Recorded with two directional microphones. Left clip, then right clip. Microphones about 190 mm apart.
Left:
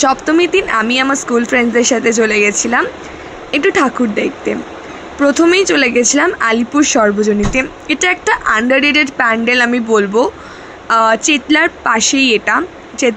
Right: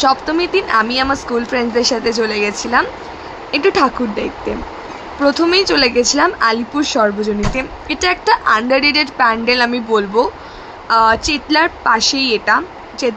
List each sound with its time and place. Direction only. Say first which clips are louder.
0.0 s speech: left 3 dB; 20° left (ahead or behind)